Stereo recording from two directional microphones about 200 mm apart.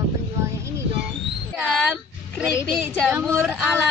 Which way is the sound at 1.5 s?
5° right (ahead or behind).